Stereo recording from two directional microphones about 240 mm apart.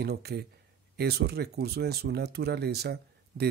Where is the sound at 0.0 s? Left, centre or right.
Right.